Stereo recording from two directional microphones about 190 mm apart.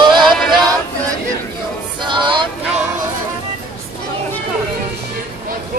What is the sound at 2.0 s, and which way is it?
Music, 25° right (ahead or behind).